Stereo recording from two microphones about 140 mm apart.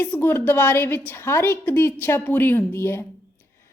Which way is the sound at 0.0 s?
15° left (ahead or behind).